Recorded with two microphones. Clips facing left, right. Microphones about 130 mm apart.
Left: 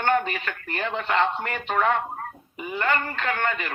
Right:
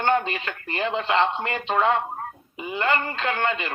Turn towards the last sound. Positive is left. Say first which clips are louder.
# right 1 dB
turn(degrees=-20)  # may be behind; listen again after turning